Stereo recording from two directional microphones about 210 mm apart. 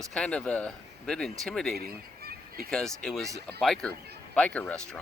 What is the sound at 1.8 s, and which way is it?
Honk, 45° right (ahead or behind).